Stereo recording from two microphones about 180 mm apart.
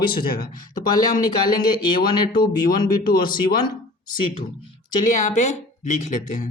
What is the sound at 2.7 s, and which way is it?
Speech, 55° left (ahead or behind).